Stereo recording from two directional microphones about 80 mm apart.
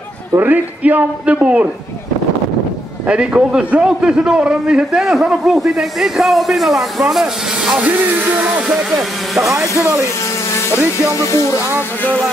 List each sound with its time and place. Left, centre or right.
0.4 s a man's voice: right
3.1 s a man's voice: centre
7.7 s music: centre
9.5 s speech: right
11.1 s music: left